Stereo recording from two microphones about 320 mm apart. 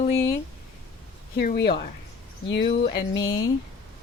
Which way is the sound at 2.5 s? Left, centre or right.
Left.